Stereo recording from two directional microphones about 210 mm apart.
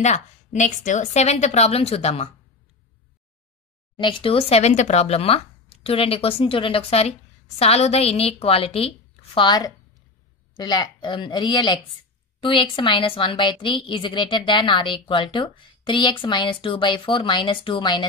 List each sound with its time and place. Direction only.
0.0 s a woman's voice: 35° left (ahead or behind)
3.9 s speech: 25° left (ahead or behind)